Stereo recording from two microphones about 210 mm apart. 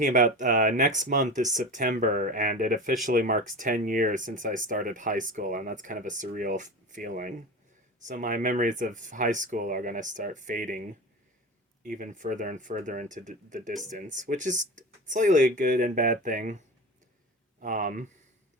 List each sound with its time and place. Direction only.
0.0 s speech: 40° right (ahead or behind)